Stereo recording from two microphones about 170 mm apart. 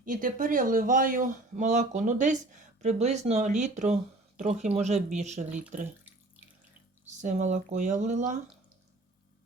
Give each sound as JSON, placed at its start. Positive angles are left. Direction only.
{"t": 0.0, "sound": "speech", "side_deg": -55}
{"t": 7.2, "sound": "speech", "side_deg": -45}